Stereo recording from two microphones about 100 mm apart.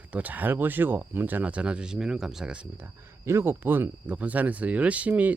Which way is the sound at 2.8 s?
25° right (ahead or behind).